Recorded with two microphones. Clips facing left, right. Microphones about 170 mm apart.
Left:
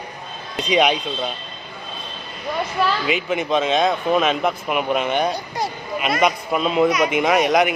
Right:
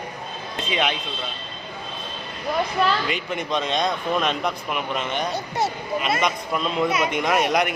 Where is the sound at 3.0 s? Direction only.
5° left (ahead or behind).